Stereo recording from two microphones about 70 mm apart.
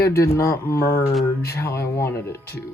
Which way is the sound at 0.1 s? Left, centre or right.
Left.